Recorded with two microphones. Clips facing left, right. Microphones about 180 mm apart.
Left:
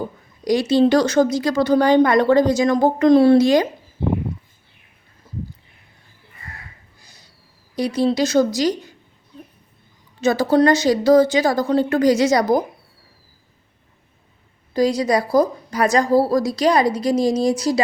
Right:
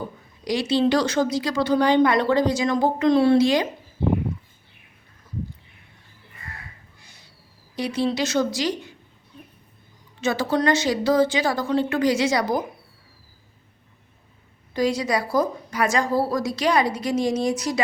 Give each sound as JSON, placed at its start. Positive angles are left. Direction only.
{"t": 0.4, "sound": "a woman's voice", "side_deg": 45}
{"t": 7.0, "sound": "a sound", "side_deg": 35}
{"t": 7.8, "sound": "a woman's voice", "side_deg": 40}
{"t": 10.2, "sound": "a woman's voice", "side_deg": 40}
{"t": 14.7, "sound": "a woman's voice", "side_deg": 35}